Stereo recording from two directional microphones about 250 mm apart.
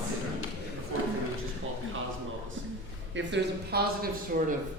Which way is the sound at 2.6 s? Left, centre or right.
Right.